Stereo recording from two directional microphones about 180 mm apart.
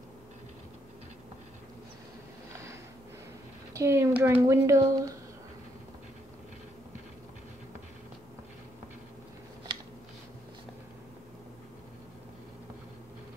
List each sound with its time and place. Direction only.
3.7 s a woman's voice: 15° right (ahead or behind)